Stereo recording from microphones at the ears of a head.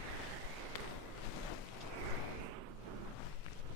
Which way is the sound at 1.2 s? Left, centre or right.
Left.